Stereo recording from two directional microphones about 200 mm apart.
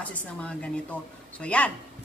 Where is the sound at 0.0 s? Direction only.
5° left (ahead or behind).